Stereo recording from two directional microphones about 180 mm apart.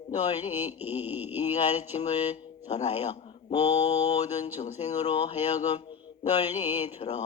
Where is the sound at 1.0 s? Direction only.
10° right (ahead or behind).